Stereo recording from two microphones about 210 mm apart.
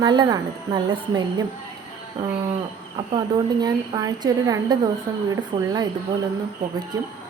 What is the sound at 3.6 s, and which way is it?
A woman's voice, 20° right (ahead or behind).